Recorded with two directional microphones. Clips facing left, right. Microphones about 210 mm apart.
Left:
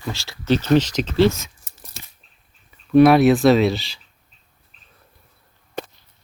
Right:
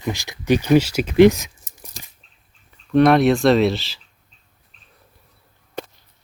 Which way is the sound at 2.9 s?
5° left (ahead or behind).